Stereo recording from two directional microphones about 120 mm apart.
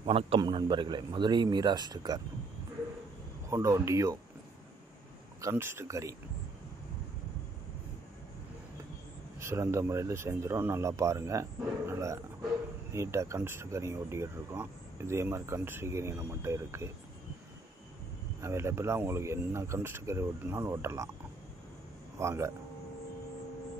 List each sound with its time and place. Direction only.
0.0 s a man's voice: 50° right (ahead or behind)
0.4 s speech: 40° right (ahead or behind)
3.4 s speech: 25° right (ahead or behind)
5.4 s speech: 20° right (ahead or behind)
9.4 s speech: 20° right (ahead or behind)
18.4 s speech: 20° right (ahead or behind)
22.2 s speech: 25° right (ahead or behind)